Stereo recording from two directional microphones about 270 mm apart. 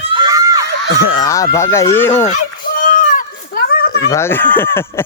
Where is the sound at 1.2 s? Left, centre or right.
Centre.